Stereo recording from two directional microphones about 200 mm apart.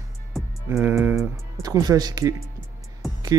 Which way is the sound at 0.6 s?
10° right (ahead or behind).